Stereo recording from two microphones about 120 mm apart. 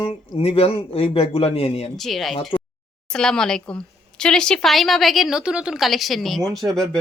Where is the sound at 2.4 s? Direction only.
45° left (ahead or behind).